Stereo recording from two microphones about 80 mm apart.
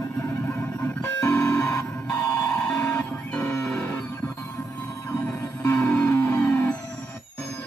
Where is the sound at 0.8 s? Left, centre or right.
Left.